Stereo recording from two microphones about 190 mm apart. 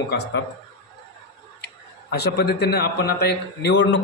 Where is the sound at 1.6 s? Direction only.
60° left (ahead or behind).